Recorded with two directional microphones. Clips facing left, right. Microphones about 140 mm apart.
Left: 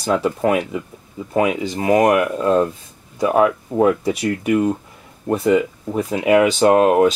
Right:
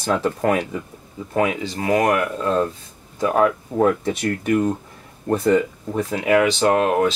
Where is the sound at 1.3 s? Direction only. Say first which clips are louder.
Left 3 dB; 15° left (ahead or behind).